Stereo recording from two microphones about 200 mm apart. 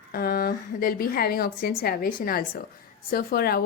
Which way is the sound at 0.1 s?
45° left (ahead or behind).